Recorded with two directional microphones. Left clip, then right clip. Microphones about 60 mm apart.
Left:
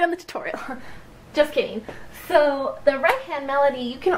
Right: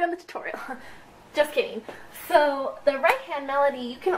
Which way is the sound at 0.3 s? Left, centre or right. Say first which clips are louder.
Left 4 dB; left.